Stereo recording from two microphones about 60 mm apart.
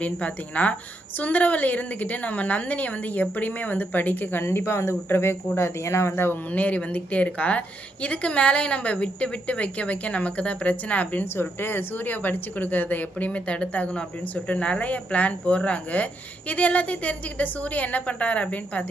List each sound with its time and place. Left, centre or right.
0.0 s a woman's voice: left